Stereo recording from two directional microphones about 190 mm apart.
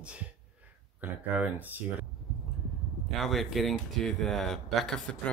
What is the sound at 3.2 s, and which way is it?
Speech, centre (ahead or behind).